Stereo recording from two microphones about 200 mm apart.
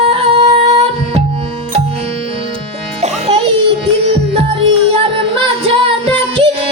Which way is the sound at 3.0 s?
30° right (ahead or behind).